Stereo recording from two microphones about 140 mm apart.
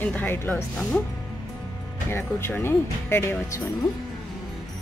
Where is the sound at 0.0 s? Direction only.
10° left (ahead or behind).